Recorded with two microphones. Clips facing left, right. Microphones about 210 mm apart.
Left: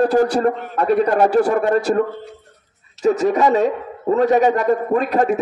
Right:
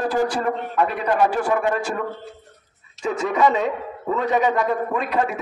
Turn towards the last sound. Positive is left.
turn(degrees=40)  # may be behind; listen again after turning